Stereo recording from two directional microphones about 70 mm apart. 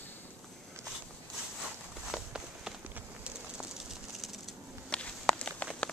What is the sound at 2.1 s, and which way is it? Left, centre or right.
Walk, centre.